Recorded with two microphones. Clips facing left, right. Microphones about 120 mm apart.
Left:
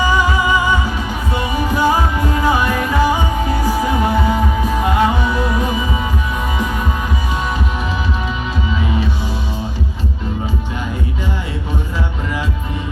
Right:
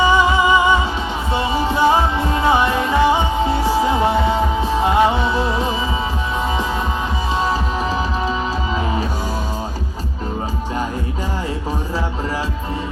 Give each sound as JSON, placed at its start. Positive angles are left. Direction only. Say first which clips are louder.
{"t": 0.0, "sound": "music", "louder": "right 2 dB", "side_deg": -25}
{"t": 8.7, "sound": "music", "louder": "left 3 dB", "side_deg": -35}